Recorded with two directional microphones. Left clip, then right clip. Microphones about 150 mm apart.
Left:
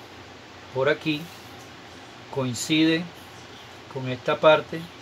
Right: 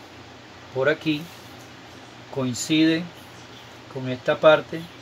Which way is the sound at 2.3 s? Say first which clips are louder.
Right 1 dB; 25° left (ahead or behind).